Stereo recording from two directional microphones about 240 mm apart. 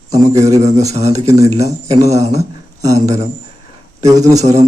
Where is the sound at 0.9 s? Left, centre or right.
Right.